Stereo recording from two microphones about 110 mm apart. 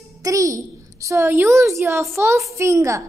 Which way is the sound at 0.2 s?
30° right (ahead or behind).